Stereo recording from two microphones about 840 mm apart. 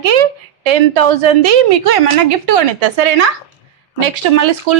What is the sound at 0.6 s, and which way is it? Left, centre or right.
A woman's voice, right.